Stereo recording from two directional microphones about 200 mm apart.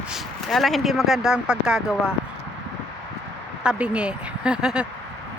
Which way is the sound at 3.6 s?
5° right (ahead or behind).